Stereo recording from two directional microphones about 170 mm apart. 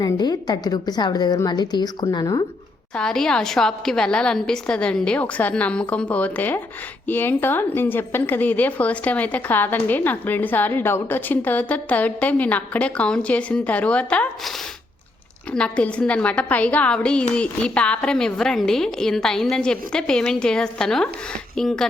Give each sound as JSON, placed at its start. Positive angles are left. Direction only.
{"t": 0.0, "sound": "a woman's voice", "side_deg": 25}
{"t": 2.9, "sound": "a woman's voice", "side_deg": 5}
{"t": 15.5, "sound": "a woman's voice", "side_deg": 5}